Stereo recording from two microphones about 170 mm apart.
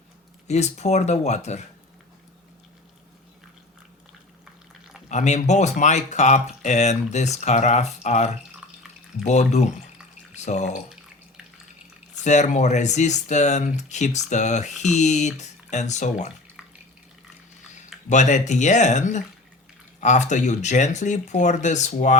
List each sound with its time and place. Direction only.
0.4 s speech: 40° left (ahead or behind)
5.0 s speech: 45° left (ahead or behind)
8.6 s water: 5° right (ahead or behind)
9.2 s speech: 40° left (ahead or behind)
12.2 s speech: 45° left (ahead or behind)
18.1 s speech: 45° left (ahead or behind)